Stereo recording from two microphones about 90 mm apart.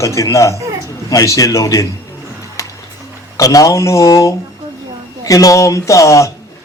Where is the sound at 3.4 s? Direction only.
40° left (ahead or behind).